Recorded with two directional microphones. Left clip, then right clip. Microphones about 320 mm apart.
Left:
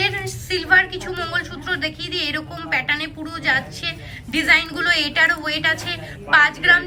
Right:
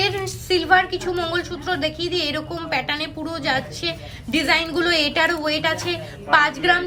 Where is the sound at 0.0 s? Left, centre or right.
Centre.